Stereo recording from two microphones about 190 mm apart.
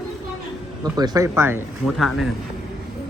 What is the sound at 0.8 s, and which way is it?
Speech, 20° right (ahead or behind).